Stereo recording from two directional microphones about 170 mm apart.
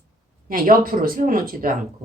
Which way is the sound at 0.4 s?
55° right (ahead or behind).